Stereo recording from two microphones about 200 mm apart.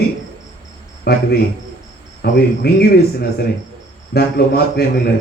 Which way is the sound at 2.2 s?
55° left (ahead or behind).